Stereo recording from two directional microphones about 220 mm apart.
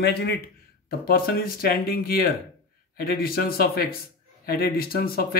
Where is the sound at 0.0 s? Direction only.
50° left (ahead or behind).